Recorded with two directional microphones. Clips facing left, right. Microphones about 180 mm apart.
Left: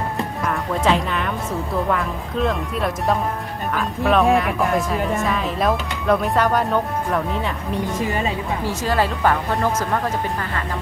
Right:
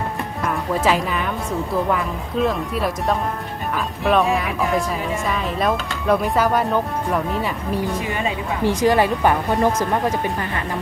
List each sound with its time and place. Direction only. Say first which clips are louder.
0.5 s speech: right 1 dB; 5° right (ahead or behind)
8.6 s speech: right 6 dB; 15° right (ahead or behind)